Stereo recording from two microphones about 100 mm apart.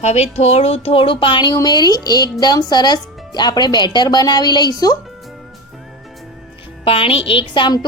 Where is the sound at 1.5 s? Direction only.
45° left (ahead or behind).